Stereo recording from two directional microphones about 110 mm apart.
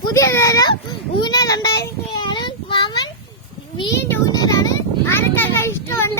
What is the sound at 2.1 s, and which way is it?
Child singing, 45° left (ahead or behind).